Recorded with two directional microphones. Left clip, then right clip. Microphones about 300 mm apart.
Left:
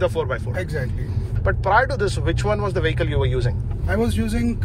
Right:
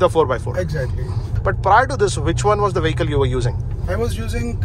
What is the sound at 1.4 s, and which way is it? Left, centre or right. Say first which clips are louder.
Speech: right 4 dB; centre.